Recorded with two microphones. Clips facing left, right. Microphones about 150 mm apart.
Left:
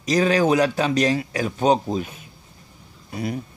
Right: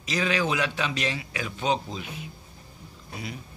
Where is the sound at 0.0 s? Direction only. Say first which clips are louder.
Left 8 dB; 40° left (ahead or behind).